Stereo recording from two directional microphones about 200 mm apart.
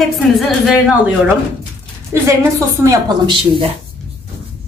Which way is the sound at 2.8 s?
20° right (ahead or behind).